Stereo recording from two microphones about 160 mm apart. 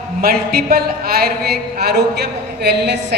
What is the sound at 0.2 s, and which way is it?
Speech, 70° right (ahead or behind).